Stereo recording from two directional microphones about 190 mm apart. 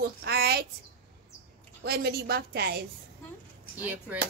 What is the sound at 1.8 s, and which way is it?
A woman's voice, 55° right (ahead or behind).